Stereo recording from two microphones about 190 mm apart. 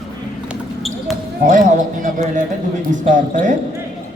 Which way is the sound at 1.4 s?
45° right (ahead or behind).